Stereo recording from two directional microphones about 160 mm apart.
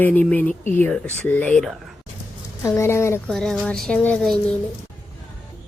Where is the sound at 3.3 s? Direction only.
5° left (ahead or behind).